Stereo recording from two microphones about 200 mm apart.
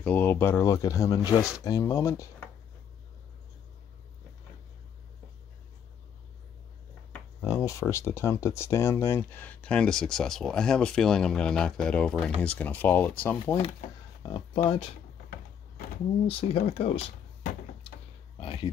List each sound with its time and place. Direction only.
0.0 s speech: 10° left (ahead or behind)
7.1 s speech: 15° left (ahead or behind)
14.2 s speech: 30° left (ahead or behind)
16.3 s speech: 30° left (ahead or behind)